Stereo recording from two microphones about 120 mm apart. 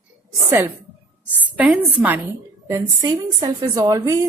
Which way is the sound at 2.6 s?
25° right (ahead or behind).